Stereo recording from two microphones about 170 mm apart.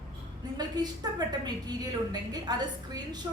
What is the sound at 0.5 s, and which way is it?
A woman's voice, 25° right (ahead or behind).